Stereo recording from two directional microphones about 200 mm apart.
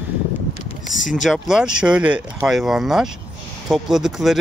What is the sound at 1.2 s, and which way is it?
Speech, centre (ahead or behind).